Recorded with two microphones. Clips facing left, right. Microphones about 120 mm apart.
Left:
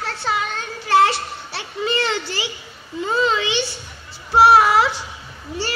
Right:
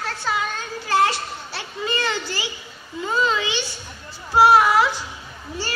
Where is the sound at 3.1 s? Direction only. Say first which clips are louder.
Left 2 dB; 25° left (ahead or behind).